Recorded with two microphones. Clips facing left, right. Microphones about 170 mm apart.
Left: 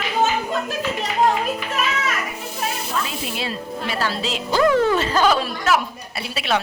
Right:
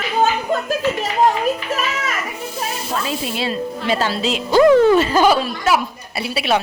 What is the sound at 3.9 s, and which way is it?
A woman's voice, 20° right (ahead or behind).